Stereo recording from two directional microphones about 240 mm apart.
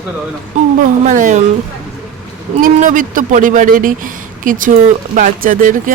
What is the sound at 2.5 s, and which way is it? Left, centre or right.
Speech, right.